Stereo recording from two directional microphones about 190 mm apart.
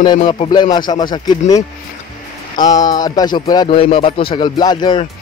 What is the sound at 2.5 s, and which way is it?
Speech, 20° left (ahead or behind).